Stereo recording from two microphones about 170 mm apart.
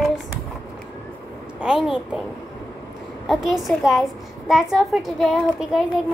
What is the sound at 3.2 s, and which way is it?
A woman's voice, centre (ahead or behind).